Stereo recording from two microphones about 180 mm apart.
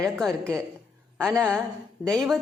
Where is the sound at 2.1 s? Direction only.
Centre (ahead or behind).